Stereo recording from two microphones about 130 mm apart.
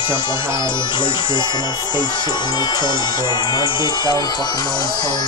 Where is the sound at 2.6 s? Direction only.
35° left (ahead or behind).